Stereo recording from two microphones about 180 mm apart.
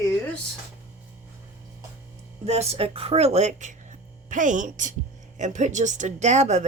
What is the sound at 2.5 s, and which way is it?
A woman's voice, 35° right (ahead or behind).